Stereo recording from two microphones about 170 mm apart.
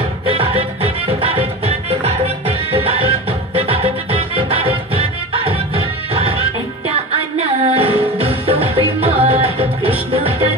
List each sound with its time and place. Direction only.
0.3 s music: 35° right (ahead or behind)